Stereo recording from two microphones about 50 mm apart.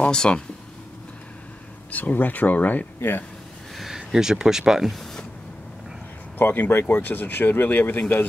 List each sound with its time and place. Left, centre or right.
0.0 s speech: centre
1.9 s speech: left
3.0 s speech: left
3.7 s speech: centre
6.3 s speech: left